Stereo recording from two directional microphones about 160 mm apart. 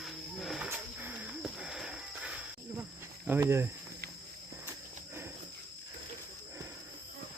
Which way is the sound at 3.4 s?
15° right (ahead or behind).